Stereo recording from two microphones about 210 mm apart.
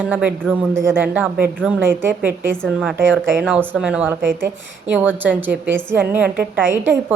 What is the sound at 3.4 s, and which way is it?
A woman's voice, 5° right (ahead or behind).